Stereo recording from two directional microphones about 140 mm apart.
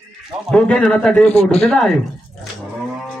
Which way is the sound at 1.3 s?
50° left (ahead or behind).